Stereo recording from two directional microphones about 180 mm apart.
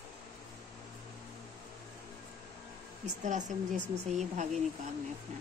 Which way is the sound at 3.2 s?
40° right (ahead or behind).